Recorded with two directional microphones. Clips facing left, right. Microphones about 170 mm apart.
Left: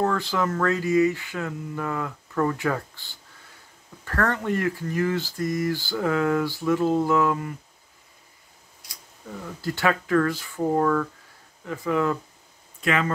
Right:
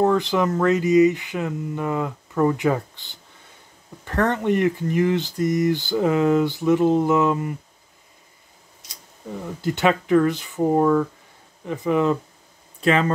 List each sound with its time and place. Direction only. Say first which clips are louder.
0.0 s speech: right 5 dB; 20° right (ahead or behind)
8.8 s speech: right 5 dB; 20° right (ahead or behind)
12.8 s speech: right 5 dB; 30° right (ahead or behind)